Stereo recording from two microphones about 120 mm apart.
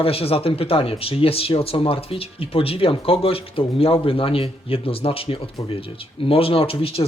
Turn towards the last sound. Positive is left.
turn(degrees=50)  # may be behind; listen again after turning